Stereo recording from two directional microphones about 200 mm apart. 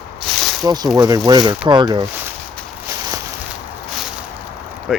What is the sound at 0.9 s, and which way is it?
Speech, 20° right (ahead or behind).